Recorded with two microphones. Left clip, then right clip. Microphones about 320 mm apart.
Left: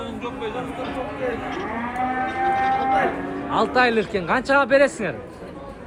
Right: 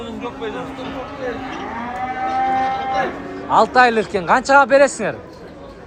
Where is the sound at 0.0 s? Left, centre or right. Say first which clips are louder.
Right 2 dB; right.